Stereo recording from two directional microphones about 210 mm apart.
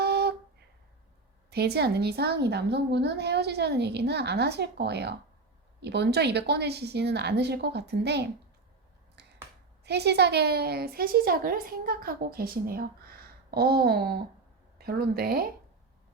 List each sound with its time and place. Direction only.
0.0 s a sound: 50° right (ahead or behind)
1.5 s a woman's voice: 50° right (ahead or behind)
9.2 s finger snapping: 55° right (ahead or behind)
9.8 s a woman's voice: 55° right (ahead or behind)